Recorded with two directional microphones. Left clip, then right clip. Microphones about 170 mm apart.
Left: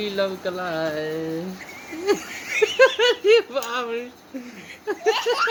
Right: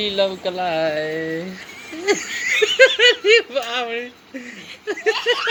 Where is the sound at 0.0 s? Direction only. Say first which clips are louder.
Right 5 dB; 10° left (ahead or behind).